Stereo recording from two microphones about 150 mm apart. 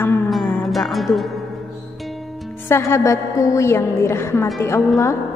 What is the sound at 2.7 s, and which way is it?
A woman's voice, 20° left (ahead or behind).